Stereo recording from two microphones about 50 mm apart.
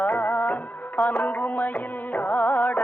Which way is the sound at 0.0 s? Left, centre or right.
Left.